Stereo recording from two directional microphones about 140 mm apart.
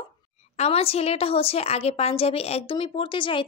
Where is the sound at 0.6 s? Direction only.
45° left (ahead or behind).